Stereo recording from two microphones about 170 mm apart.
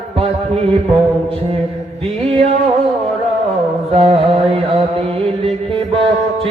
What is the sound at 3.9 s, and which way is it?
Music, 35° right (ahead or behind).